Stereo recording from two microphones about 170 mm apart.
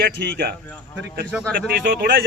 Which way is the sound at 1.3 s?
5° left (ahead or behind).